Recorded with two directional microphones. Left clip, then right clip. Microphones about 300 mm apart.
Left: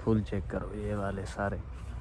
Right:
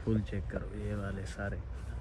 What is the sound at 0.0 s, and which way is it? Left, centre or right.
Speech, centre.